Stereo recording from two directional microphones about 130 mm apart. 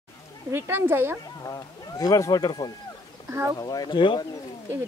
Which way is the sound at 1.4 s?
25° left (ahead or behind).